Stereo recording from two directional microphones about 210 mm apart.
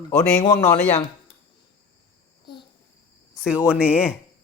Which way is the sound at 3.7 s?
5° right (ahead or behind).